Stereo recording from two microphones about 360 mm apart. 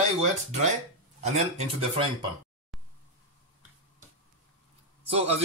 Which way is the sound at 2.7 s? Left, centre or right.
Centre.